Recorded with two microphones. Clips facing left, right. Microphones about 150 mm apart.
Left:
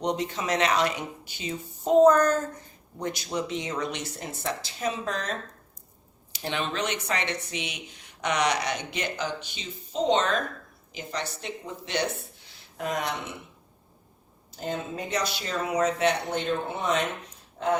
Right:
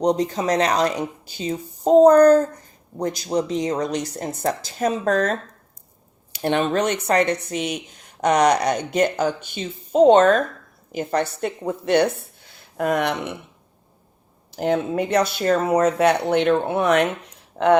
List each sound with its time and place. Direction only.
0.0 s speech: 35° right (ahead or behind); by 13.3 s 65° right (ahead or behind)
14.5 s speech: 75° right (ahead or behind)